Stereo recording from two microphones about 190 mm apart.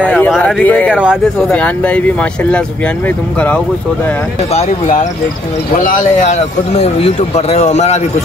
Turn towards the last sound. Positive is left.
turn(degrees=35)  # may be behind; listen again after turning